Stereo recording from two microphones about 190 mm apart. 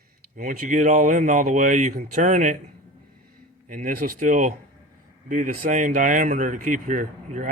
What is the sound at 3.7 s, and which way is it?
Speech, 45° right (ahead or behind).